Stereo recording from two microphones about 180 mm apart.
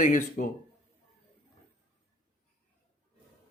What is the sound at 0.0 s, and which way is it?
Speech, 45° left (ahead or behind).